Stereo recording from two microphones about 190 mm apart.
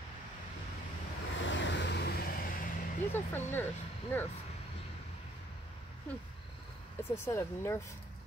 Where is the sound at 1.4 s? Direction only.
75° left (ahead or behind); by 2.7 s 50° left (ahead or behind).